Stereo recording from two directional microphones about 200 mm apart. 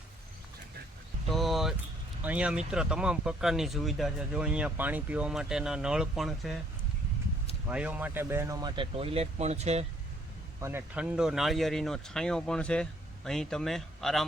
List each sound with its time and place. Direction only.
1.3 s a sound: centre (ahead or behind)
2.2 s speech: 5° right (ahead or behind)
7.7 s speech: 5° right (ahead or behind); by 9.8 s 35° right (ahead or behind)
10.6 s speech: 10° right (ahead or behind)